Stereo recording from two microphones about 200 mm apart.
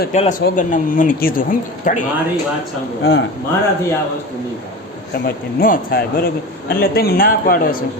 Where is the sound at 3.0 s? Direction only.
55° left (ahead or behind).